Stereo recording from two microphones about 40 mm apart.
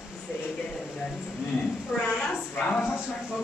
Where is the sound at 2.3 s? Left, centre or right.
Left.